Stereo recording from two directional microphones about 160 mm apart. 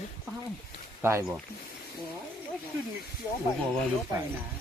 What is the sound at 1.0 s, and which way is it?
Speech, 20° right (ahead or behind).